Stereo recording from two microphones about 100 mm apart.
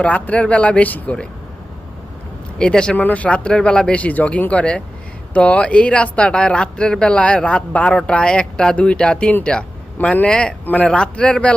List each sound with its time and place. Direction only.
0.0 s speech: 15° left (ahead or behind)
2.6 s speech: 10° left (ahead or behind)